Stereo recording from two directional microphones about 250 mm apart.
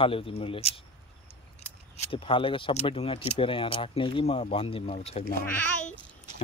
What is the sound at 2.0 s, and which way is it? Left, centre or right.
Speech, left.